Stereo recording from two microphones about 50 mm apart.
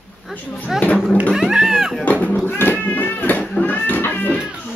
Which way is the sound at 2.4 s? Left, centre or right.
Left.